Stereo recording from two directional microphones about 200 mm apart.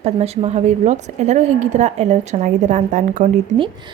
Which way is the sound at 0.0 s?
30° right (ahead or behind).